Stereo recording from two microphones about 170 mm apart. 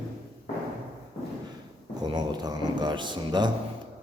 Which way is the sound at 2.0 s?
25° right (ahead or behind).